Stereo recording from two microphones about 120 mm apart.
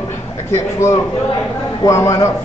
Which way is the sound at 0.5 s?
25° left (ahead or behind).